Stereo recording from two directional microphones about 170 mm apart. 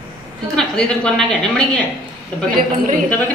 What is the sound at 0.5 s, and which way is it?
A woman's voice, 5° left (ahead or behind).